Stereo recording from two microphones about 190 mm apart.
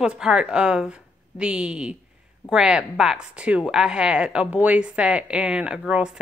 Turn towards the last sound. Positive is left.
turn(degrees=-5)  # may be behind; listen again after turning